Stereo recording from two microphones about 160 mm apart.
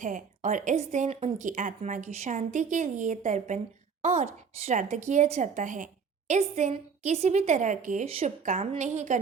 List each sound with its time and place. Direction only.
0.0 s a woman's voice: 55° right (ahead or behind)
8.0 s speech: 40° right (ahead or behind)
8.8 s a woman's voice: 50° right (ahead or behind)